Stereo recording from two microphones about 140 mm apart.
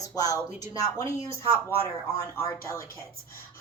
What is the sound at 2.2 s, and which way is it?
Speech, 20° left (ahead or behind).